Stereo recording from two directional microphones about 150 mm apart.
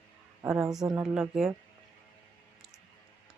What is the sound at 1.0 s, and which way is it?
Speech, 5° right (ahead or behind).